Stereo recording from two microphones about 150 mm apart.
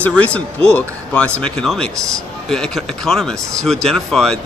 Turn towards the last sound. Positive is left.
turn(degrees=5)  # may be behind; listen again after turning